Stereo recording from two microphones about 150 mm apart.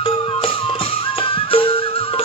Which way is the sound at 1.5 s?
35° left (ahead or behind).